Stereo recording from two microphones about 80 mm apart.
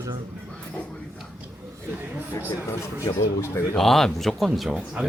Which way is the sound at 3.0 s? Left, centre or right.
Left.